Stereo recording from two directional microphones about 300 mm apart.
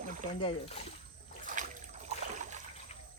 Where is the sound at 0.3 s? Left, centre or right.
Centre.